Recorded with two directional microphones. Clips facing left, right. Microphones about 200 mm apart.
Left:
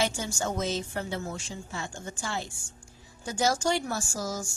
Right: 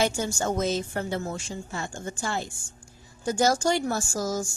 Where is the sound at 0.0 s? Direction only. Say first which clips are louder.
Right 4 dB; 50° right (ahead or behind).